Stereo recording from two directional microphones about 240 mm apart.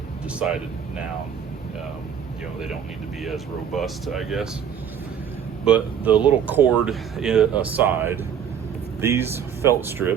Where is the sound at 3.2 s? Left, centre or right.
Centre.